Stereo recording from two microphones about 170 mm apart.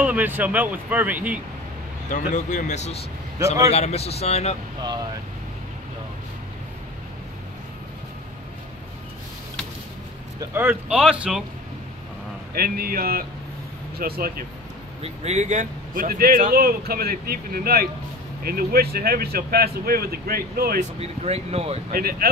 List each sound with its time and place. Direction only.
0.0 s speech: 10° right (ahead or behind)
2.0 s speech: 45° left (ahead or behind)
10.4 s speech: 15° right (ahead or behind)
12.5 s speech: 60° right (ahead or behind)
15.0 s speech: 40° right (ahead or behind); by 20.8 s 60° right (ahead or behind)
21.0 s speech: 40° right (ahead or behind)
21.9 s speech: 60° right (ahead or behind)